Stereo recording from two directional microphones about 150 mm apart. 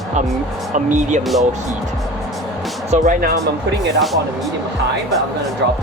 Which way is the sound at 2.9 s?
65° right (ahead or behind).